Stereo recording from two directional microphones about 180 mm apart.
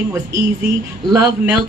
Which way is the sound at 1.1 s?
15° right (ahead or behind).